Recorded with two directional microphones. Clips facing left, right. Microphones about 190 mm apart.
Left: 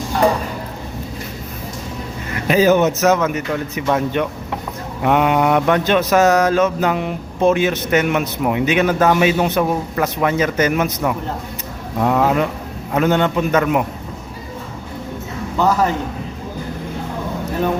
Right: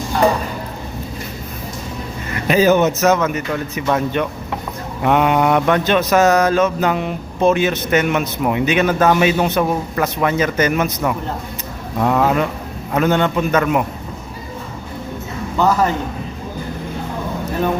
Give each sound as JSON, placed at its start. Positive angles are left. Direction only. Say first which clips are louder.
{"t": 2.5, "sound": "mantra", "louder": "even", "side_deg": 5}